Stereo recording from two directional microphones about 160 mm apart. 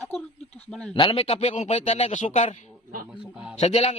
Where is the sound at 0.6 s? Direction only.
5° left (ahead or behind).